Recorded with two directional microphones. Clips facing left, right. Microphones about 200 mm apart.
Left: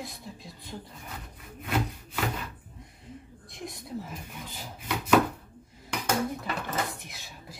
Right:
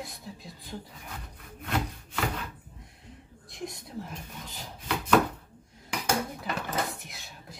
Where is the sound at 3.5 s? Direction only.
Centre (ahead or behind).